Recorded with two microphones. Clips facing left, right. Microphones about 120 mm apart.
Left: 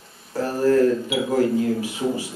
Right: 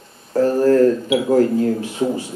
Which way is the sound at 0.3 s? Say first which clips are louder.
Right 5 dB; 45° right (ahead or behind).